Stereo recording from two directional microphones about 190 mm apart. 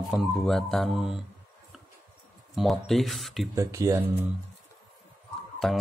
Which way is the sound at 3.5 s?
15° right (ahead or behind).